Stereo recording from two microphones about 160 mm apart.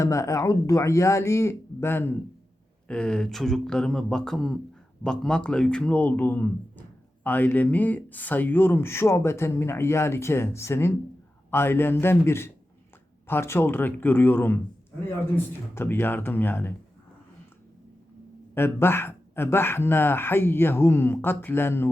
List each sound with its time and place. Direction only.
0.0 s speech: 20° left (ahead or behind)
15.7 s speech: 15° left (ahead or behind)
18.5 s speech: 15° left (ahead or behind)